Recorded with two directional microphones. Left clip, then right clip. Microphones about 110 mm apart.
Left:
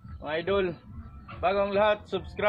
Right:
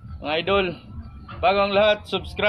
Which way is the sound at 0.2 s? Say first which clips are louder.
Right 6 dB; 15° left (ahead or behind).